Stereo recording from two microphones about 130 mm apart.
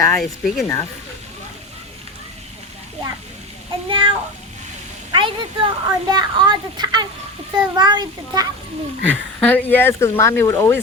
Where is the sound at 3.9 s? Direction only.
40° right (ahead or behind).